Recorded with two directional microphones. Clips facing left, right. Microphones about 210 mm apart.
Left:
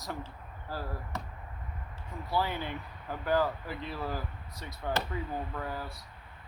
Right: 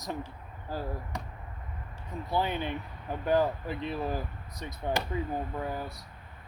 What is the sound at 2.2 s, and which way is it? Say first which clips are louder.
Speech: right 2 dB; 20° right (ahead or behind).